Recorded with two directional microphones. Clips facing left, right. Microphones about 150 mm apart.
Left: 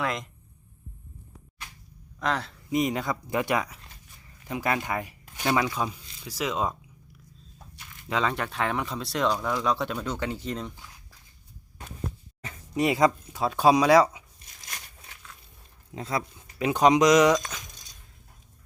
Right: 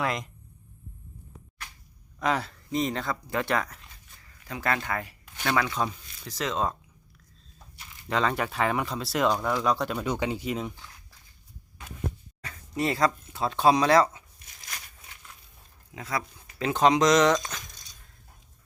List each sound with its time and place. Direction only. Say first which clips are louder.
0.0 s speech: even; centre (ahead or behind)
2.1 s speech: right 2 dB; 5° right (ahead or behind)
2.6 s speech: left 3 dB; 10° left (ahead or behind)
8.0 s speech: right 1 dB; centre (ahead or behind)
10.1 s speech: right 2 dB; 15° right (ahead or behind)
12.4 s speech: left 3 dB; 20° left (ahead or behind)
16.0 s speech: left 2 dB; 25° left (ahead or behind)
16.6 s speech: left 2 dB; 15° left (ahead or behind)